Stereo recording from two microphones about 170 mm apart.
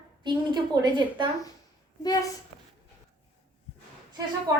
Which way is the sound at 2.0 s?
20° left (ahead or behind).